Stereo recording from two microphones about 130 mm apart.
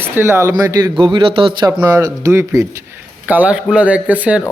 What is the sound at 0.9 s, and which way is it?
Speech, 40° right (ahead or behind).